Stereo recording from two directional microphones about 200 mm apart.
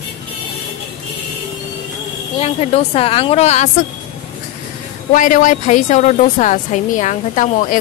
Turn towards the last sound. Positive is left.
turn(degrees=40)  # may be behind; listen again after turning